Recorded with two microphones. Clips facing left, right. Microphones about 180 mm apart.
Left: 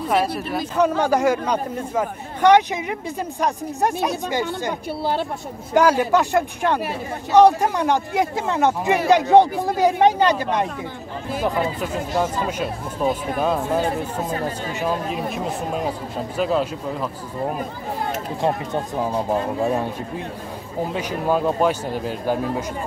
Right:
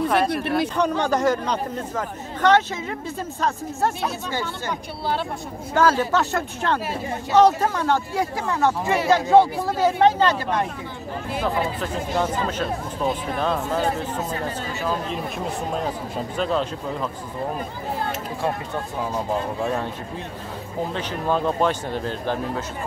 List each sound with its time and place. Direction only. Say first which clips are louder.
0.4 s speech: right 3 dB; 65° right (ahead or behind)
0.7 s speech: left 3 dB; 5° left (ahead or behind)
5.8 s speech: left 3 dB; 15° left (ahead or behind)
15.0 s speech: left 3 dB; 5° left (ahead or behind)
19.6 s speech: left 3 dB; 15° left (ahead or behind)
20.9 s speech: left 3 dB; 10° left (ahead or behind)